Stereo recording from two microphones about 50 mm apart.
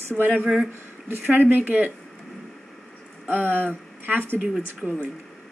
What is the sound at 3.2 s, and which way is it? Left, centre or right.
A woman's voice, right.